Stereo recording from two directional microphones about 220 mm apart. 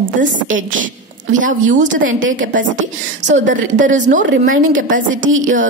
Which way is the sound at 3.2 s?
35° right (ahead or behind).